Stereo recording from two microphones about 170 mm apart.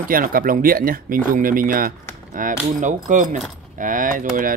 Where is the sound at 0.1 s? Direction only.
55° right (ahead or behind).